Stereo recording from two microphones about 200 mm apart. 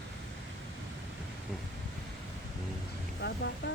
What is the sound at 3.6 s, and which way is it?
Music, 55° left (ahead or behind).